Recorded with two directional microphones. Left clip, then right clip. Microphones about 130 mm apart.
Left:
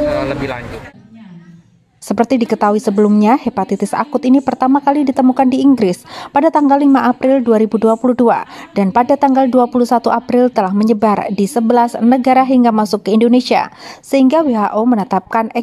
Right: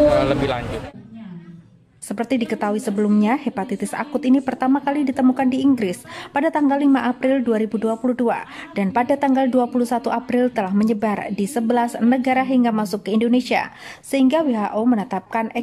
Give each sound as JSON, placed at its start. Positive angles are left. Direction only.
{"t": 0.2, "sound": "speech", "side_deg": 5}
{"t": 2.0, "sound": "a woman's voice", "side_deg": 40}